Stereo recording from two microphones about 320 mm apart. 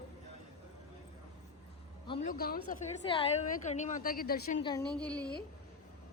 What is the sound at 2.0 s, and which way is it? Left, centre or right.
Vehicle, centre.